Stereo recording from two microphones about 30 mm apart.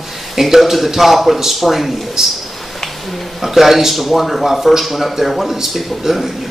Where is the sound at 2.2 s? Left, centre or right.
Centre.